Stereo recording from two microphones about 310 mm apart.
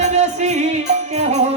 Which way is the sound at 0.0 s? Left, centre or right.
Right.